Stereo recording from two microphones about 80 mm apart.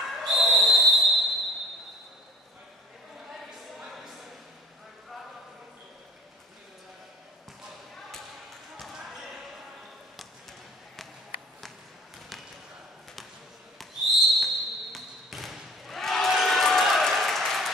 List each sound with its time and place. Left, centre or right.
0.0 s whistle: centre
3.3 s a sound: centre
8.7 s basketball bounce: centre
13.7 s basketball bounce: centre